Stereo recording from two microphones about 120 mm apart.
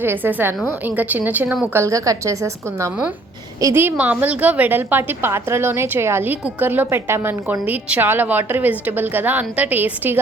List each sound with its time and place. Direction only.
0.0 s a woman's voice: 15° right (ahead or behind)